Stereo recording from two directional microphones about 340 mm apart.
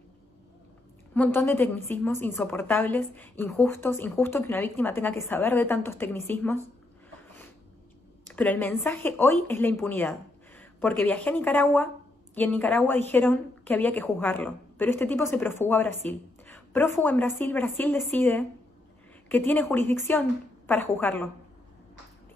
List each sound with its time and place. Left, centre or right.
1.1 s a woman's voice: centre
8.3 s a woman's voice: centre